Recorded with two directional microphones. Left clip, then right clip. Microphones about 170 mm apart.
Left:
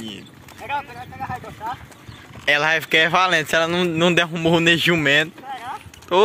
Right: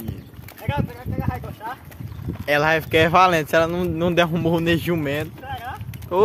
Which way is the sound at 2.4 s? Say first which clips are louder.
Left 1 dB; centre (ahead or behind).